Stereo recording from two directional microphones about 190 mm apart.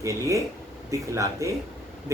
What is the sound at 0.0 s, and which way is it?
Speech, 15° right (ahead or behind).